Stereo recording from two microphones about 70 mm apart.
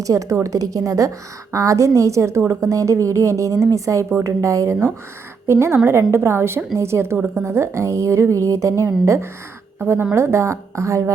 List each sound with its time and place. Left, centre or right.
0.0 s a woman's voice: right
9.8 s a woman's voice: right